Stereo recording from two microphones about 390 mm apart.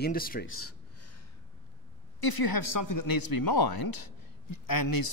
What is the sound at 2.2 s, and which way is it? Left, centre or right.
A man's voice, left.